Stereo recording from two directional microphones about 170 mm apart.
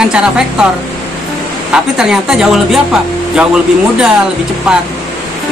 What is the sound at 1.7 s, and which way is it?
Speech, 5° right (ahead or behind).